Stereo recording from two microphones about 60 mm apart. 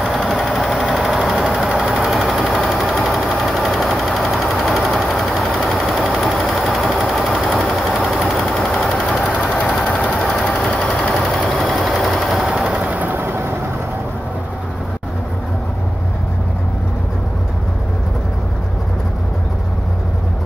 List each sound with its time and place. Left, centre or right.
0.0 s engine: centre
2.6 s a sound: centre
9.8 s engine: left
10.6 s a sound: centre
11.2 s sewing machine: centre
12.8 s vehicle: right